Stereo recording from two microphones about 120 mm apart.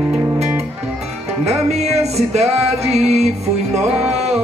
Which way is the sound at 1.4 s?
60° right (ahead or behind).